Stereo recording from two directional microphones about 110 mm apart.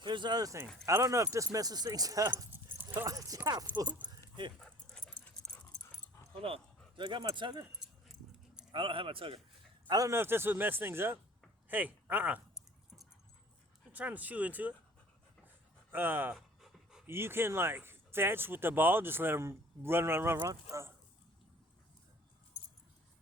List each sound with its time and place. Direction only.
0.0 s speech: 45° right (ahead or behind)
2.5 s dog: 20° right (ahead or behind)
3.1 s speech: 30° right (ahead or behind)
4.6 s dog: 5° left (ahead or behind)
6.4 s speech: 55° right (ahead or behind)
7.7 s keys jangling: 5° right (ahead or behind)
8.7 s speech: 50° right (ahead or behind)
9.9 s speech: 35° right (ahead or behind)
10.2 s speech: 20° right (ahead or behind)
13.9 s speech: 15° right (ahead or behind)
15.9 s speech: 15° right (ahead or behind)
16.3 s pant: centre (ahead or behind)
17.1 s speech: 20° right (ahead or behind)